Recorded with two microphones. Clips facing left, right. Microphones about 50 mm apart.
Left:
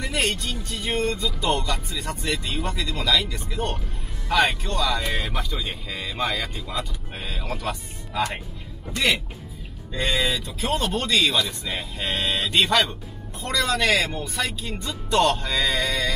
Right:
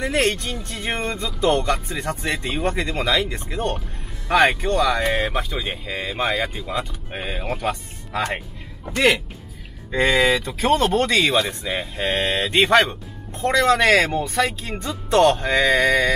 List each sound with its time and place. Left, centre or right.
0.0 s speech: right
7.6 s speech: right
10.6 s speech: right
11.0 s speech: right
11.6 s speech: right
12.4 s speech: right
14.4 s speech: right